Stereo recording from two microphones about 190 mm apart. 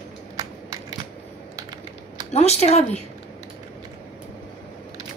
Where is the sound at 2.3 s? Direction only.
35° left (ahead or behind).